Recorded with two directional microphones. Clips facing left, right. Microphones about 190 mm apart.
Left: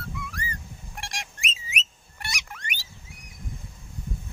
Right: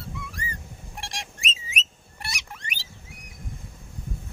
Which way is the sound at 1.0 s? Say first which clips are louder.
Right 1 dB; 30° right (ahead or behind).